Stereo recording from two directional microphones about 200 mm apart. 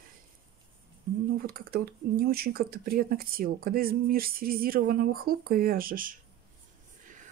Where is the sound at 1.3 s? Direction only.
50° right (ahead or behind).